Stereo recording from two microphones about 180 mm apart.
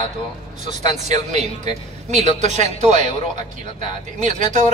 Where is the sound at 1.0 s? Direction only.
40° right (ahead or behind).